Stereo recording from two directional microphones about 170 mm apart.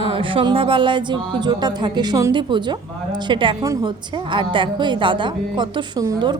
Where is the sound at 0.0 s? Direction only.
30° right (ahead or behind).